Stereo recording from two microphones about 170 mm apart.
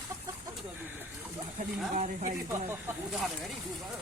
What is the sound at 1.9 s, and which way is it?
Speech, 45° right (ahead or behind).